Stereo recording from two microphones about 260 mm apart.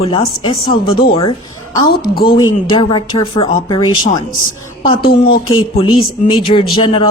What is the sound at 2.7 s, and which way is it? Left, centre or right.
Speech, centre.